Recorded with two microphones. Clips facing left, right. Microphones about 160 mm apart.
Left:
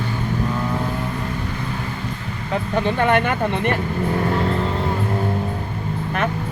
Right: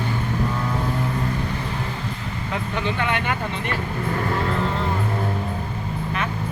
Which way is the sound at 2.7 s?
45° left (ahead or behind).